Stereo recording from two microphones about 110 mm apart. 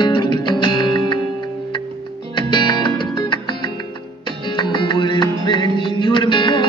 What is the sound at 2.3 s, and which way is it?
Music, 45° left (ahead or behind).